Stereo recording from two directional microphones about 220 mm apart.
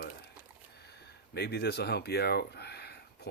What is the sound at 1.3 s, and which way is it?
Speech, 50° left (ahead or behind).